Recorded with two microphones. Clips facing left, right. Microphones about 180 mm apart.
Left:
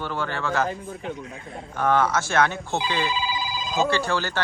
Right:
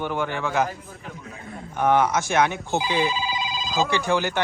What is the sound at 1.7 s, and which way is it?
Speech, 15° right (ahead or behind).